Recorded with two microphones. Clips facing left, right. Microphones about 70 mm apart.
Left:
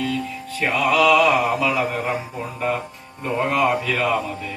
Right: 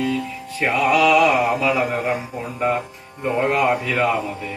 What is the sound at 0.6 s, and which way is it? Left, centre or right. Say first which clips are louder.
Mantra: right 1 dB; centre.